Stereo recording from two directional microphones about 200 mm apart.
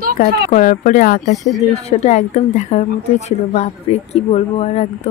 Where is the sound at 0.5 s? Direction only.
40° left (ahead or behind).